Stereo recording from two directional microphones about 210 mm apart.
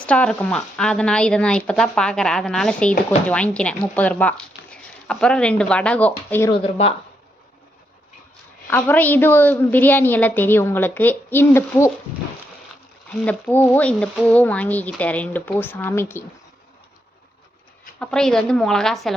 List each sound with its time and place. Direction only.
0.0 s speech: 5° left (ahead or behind)
6.5 s speech: 25° left (ahead or behind)
8.6 s a woman's voice: 10° left (ahead or behind)
13.2 s a woman's voice: 10° left (ahead or behind)
18.0 s speech: 5° left (ahead or behind)